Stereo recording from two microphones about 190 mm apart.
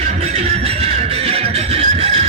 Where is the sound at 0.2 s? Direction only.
35° right (ahead or behind).